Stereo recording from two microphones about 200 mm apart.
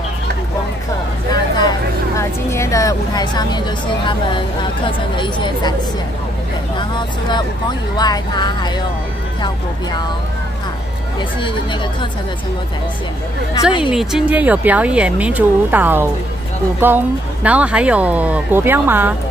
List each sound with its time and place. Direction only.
1.3 s speech: 20° left (ahead or behind)
6.8 s speech: 20° left (ahead or behind)
13.9 s speech: 5° right (ahead or behind)